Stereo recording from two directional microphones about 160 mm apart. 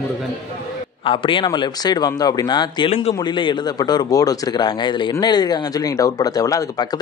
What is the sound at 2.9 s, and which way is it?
Speech, 40° left (ahead or behind).